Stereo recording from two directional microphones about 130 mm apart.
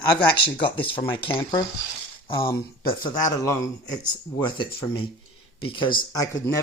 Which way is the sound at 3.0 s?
25° left (ahead or behind).